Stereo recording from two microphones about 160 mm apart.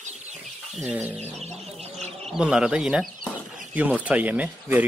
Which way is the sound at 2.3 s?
5° right (ahead or behind).